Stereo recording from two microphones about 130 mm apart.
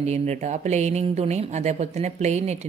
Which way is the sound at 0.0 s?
60° right (ahead or behind).